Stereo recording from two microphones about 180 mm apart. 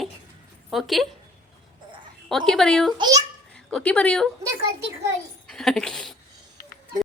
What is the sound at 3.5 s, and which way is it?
Speech, 5° left (ahead or behind).